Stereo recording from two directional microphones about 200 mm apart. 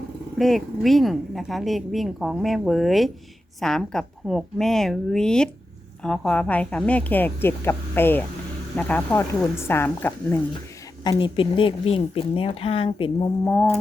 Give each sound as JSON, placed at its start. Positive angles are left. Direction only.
{"t": 0.3, "sound": "a woman's voice", "side_deg": 0}
{"t": 11.0, "sound": "a woman's voice", "side_deg": 20}
{"t": 13.4, "sound": "a woman's voice", "side_deg": 10}